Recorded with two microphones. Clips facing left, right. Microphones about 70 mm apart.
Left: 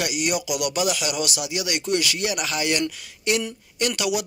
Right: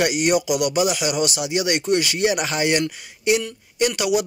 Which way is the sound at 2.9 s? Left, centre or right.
Centre.